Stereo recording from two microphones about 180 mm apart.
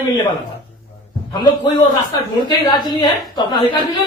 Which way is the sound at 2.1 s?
25° left (ahead or behind).